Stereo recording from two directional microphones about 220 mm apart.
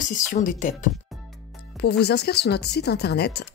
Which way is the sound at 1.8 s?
50° left (ahead or behind).